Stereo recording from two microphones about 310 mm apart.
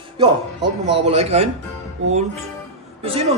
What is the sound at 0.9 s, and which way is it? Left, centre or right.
Speech, centre.